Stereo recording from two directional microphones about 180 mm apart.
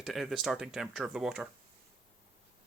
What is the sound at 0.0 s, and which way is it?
Speech, centre (ahead or behind).